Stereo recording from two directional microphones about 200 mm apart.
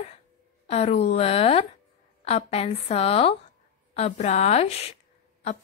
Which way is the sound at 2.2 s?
30° left (ahead or behind).